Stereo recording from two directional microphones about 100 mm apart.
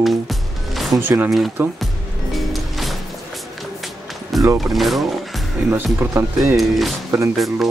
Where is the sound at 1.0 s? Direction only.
20° right (ahead or behind).